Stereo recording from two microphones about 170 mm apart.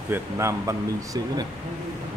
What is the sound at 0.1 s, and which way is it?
Speech, 15° right (ahead or behind).